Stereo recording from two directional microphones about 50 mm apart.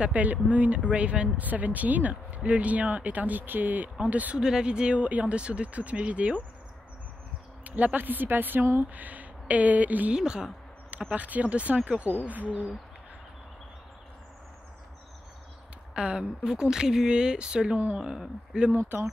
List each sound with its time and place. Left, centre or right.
0.0 s speech: right
1.4 s speech: right
4.4 s speech: centre
7.6 s speech: right
10.1 s speech: centre
10.9 s speech: right
15.9 s speech: centre